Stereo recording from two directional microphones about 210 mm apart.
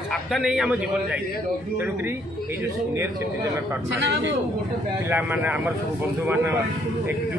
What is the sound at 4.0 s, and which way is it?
Speech, 60° right (ahead or behind).